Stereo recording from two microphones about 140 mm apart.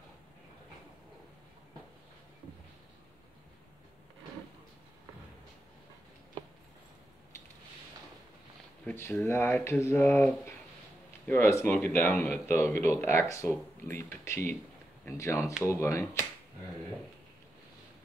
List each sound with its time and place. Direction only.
8.8 s speech: 15° left (ahead or behind)